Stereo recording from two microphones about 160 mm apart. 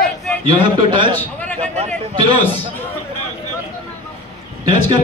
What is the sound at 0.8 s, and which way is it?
Speech, 30° right (ahead or behind).